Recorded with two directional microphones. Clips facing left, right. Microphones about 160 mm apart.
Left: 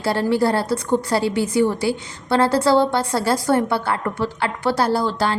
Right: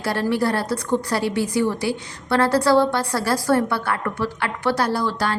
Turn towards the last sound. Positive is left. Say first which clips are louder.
# left 3 dB
turn(degrees=25)  # may be behind; listen again after turning